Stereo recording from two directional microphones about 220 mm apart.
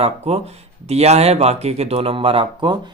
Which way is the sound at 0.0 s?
30° right (ahead or behind).